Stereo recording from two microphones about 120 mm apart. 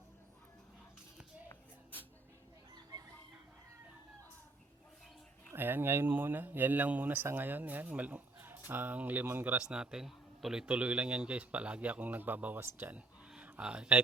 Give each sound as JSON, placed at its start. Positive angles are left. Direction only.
{"t": 1.5, "sound": "shuffle", "side_deg": 15}
{"t": 5.5, "sound": "speech", "side_deg": -15}
{"t": 13.3, "sound": "a sound", "side_deg": -10}